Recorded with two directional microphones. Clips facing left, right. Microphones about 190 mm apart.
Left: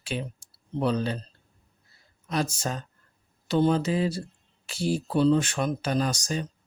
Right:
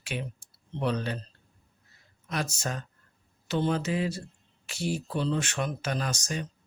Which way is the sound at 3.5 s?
35° left (ahead or behind).